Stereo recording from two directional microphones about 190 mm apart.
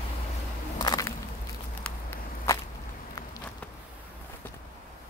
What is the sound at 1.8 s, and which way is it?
Walk, 15° left (ahead or behind).